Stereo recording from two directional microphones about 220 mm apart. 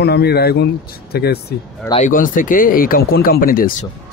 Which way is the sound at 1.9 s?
35° left (ahead or behind).